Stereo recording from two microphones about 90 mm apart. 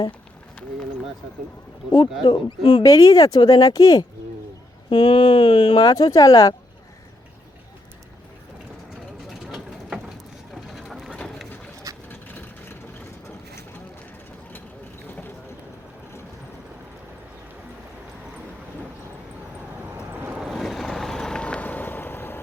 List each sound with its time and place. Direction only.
1.9 s speech: 60° left (ahead or behind)
2.8 s speech: 40° left (ahead or behind)
4.9 s speech: 60° left (ahead or behind); by 6.5 s 40° left (ahead or behind)
10.5 s vehicle: centre (ahead or behind)
12.0 s vehicle: 20° left (ahead or behind)
20.0 s boat: 20° right (ahead or behind)
20.3 s vehicle: 5° right (ahead or behind); by 22.4 s 25° left (ahead or behind)